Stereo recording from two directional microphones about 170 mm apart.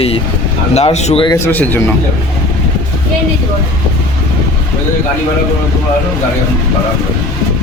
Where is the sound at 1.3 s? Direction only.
10° left (ahead or behind).